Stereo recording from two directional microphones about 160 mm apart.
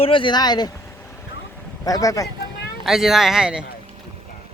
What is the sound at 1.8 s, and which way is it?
Speech, 20° left (ahead or behind).